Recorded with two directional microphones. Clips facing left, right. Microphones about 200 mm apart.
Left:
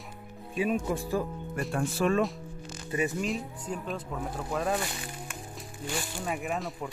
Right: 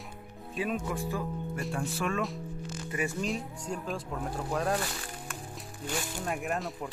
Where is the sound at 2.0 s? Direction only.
35° left (ahead or behind).